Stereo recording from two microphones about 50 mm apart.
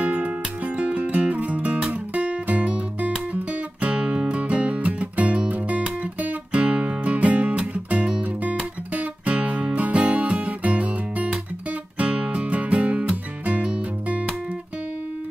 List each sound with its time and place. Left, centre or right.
0.0 s music: right